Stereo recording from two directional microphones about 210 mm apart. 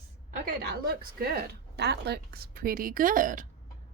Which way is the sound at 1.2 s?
50° right (ahead or behind).